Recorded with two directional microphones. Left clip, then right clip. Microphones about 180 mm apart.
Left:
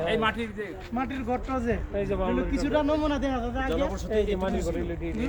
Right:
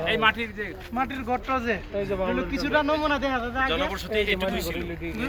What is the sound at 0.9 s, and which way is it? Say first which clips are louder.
A man's voice: right 3 dB; 20° right (ahead or behind).